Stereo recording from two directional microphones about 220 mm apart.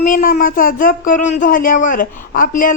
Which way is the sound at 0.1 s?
40° left (ahead or behind).